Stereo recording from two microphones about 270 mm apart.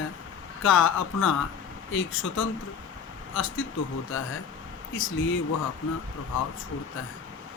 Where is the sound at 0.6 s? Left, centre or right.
Left.